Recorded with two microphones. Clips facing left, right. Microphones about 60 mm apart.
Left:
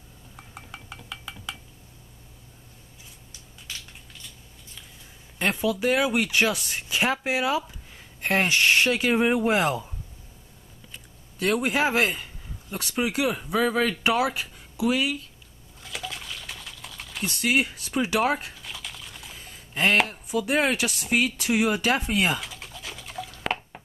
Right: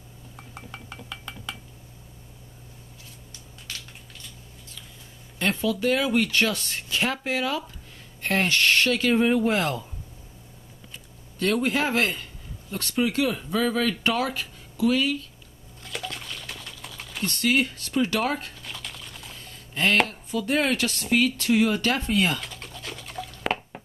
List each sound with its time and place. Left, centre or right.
0.4 s dishes: centre
3.6 s a sound: centre
5.4 s speech: centre
11.3 s speech: centre
15.8 s liquid: centre
21.4 s a sound: centre